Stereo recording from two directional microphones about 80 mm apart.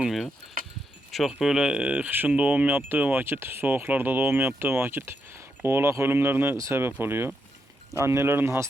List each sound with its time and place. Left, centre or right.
0.0 s speech: centre; by 8.6 s right